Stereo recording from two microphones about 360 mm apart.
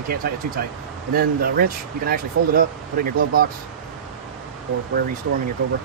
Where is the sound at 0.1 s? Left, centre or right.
Right.